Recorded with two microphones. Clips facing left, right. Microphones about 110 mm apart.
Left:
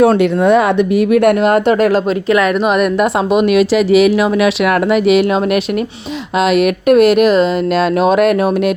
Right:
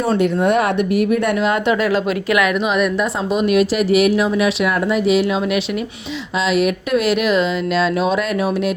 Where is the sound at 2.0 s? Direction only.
30° left (ahead or behind).